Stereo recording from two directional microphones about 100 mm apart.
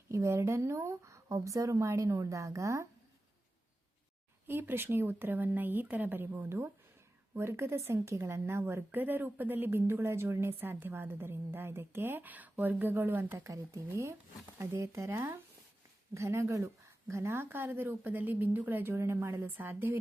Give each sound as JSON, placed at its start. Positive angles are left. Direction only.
{"t": 0.1, "sound": "speech", "side_deg": -30}
{"t": 4.4, "sound": "a woman's voice", "side_deg": -20}
{"t": 13.4, "sound": "a woman's voice", "side_deg": -30}